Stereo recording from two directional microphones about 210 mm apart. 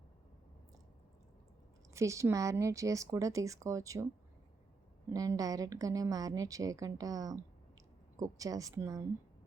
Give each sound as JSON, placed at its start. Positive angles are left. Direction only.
{"t": 1.9, "sound": "a woman's voice", "side_deg": -15}
{"t": 5.1, "sound": "a woman's voice", "side_deg": -15}